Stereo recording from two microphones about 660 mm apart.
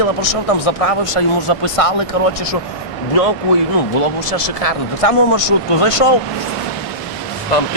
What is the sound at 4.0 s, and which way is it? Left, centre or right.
Speech, left.